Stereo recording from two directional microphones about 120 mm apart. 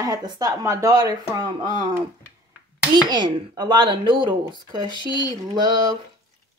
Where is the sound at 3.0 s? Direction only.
35° right (ahead or behind).